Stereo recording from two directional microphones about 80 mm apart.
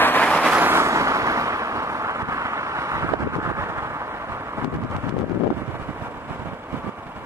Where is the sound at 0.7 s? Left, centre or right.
Right.